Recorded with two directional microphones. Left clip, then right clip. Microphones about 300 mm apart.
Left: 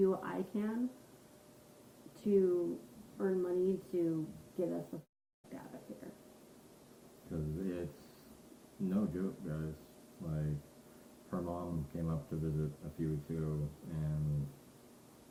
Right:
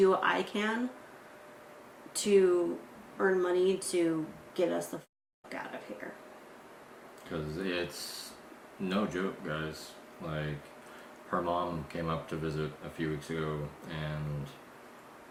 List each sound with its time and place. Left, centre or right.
0.0 s speech: centre
2.1 s speech: centre
7.3 s speech: centre
8.9 s speech: centre
11.9 s speech: centre